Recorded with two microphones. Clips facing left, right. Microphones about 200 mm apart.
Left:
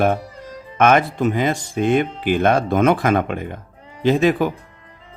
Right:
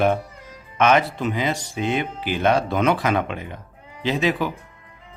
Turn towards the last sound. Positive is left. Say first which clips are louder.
# left 6 dB
turn(degrees=50)  # may be behind; listen again after turning